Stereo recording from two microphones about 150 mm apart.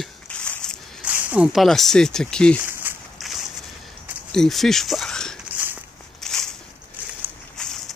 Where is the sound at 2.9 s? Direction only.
10° right (ahead or behind).